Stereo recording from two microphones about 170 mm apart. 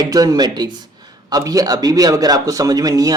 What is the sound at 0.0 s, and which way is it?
A man's voice, 20° right (ahead or behind).